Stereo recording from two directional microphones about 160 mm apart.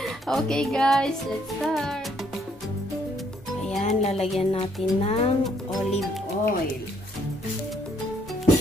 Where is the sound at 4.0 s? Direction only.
40° left (ahead or behind).